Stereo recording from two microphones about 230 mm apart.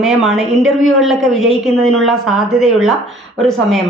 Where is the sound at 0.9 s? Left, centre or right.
Centre.